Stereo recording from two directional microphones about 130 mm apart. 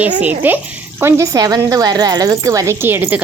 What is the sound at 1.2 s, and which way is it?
A woman's voice, 30° right (ahead or behind).